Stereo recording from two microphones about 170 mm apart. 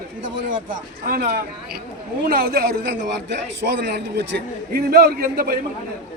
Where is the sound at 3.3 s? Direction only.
90° right.